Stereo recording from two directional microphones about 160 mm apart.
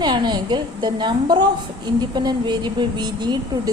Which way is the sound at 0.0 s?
25° right (ahead or behind).